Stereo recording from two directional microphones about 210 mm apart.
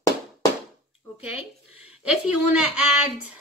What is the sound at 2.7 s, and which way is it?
Speech, 5° right (ahead or behind).